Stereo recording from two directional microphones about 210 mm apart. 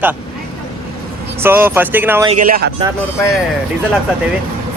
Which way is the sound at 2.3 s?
40° right (ahead or behind).